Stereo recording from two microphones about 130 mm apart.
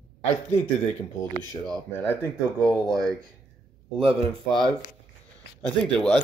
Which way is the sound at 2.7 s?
5° left (ahead or behind).